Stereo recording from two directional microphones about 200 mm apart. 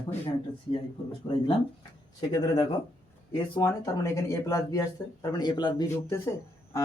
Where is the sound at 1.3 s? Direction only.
25° left (ahead or behind).